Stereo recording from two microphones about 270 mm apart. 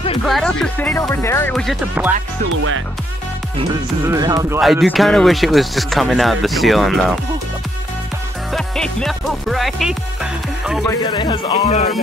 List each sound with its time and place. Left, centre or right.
0.3 s speech: centre
4.0 s speech: centre
4.6 s speech: centre
8.5 s speech: centre
10.9 s speech: centre